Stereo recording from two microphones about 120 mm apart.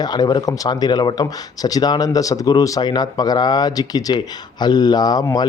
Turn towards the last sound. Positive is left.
turn(degrees=35)  # may be behind; listen again after turning